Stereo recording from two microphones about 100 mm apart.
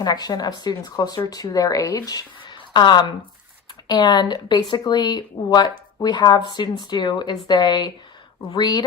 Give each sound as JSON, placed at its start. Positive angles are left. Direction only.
{"t": 0.0, "sound": "speech", "side_deg": 40}
{"t": 2.4, "sound": "a sound", "side_deg": 50}
{"t": 3.8, "sound": "speech", "side_deg": 45}